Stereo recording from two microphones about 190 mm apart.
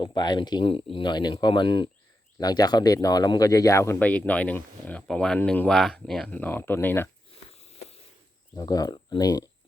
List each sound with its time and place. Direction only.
0.0 s speech: 20° left (ahead or behind)
8.5 s speech: 20° left (ahead or behind)